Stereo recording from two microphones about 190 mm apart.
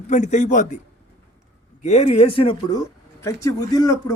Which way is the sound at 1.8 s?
35° left (ahead or behind).